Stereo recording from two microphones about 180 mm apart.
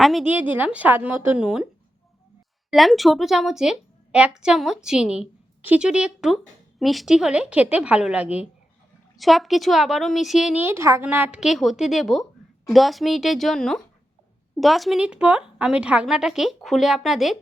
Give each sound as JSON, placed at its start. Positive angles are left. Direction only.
{"t": 0.0, "sound": "a woman's voice", "side_deg": 0}
{"t": 2.6, "sound": "a woman's voice", "side_deg": 0}